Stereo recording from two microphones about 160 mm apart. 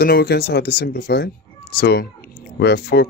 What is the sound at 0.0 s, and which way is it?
Speech, 80° left.